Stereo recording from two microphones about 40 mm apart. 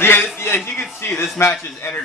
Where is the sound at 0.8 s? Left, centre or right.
Left.